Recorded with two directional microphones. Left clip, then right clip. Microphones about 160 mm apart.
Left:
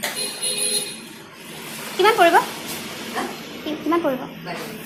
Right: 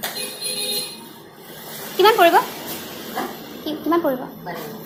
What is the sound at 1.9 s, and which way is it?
Speech, 15° right (ahead or behind).